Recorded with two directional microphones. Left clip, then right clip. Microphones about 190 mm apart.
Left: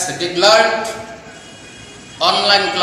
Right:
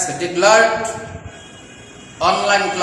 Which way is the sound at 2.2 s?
5° right (ahead or behind).